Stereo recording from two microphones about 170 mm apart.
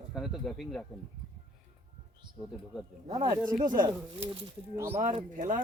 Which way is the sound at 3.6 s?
50° right (ahead or behind).